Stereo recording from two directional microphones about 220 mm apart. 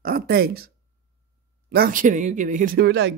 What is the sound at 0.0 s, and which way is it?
Speech, 45° right (ahead or behind).